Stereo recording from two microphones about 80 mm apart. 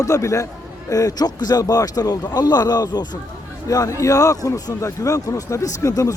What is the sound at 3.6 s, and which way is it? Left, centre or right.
Speech, left.